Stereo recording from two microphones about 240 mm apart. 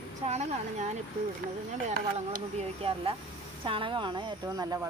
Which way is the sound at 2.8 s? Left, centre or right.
Right.